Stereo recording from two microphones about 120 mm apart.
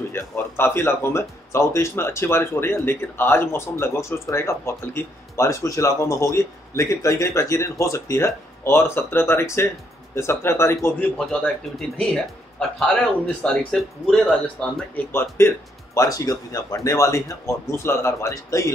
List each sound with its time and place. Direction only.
0.1 s speech: 20° left (ahead or behind)
11.1 s a man's voice: 5° left (ahead or behind)
15.1 s speech: 20° left (ahead or behind)